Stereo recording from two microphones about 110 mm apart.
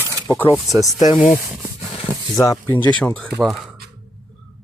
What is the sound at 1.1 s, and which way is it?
Speech, 50° left (ahead or behind).